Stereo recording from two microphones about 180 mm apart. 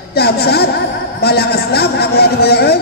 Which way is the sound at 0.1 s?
60° left (ahead or behind).